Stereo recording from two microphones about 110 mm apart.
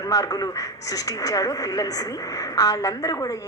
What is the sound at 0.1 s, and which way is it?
Speech, 35° left (ahead or behind).